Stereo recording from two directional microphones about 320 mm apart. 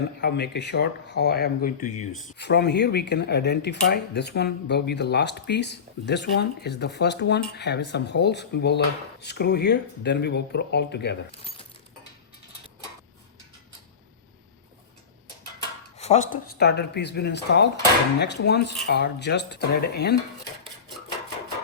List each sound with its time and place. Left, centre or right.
0.2 s speech: left
16.0 s speech: left